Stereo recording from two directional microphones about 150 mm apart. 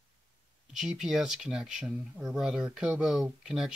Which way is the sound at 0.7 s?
5° right (ahead or behind).